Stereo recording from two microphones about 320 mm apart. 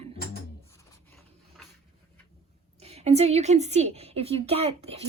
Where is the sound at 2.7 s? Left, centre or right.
Centre.